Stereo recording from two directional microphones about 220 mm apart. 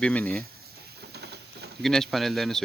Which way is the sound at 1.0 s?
50° right (ahead or behind).